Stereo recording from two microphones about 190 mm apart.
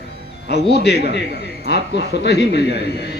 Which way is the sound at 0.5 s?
60° left (ahead or behind).